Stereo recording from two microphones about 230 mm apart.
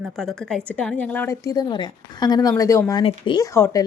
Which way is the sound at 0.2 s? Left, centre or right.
Centre.